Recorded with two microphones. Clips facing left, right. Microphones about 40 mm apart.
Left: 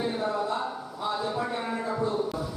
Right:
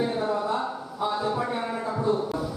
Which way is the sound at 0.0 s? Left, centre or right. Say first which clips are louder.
Right 2 dB; centre.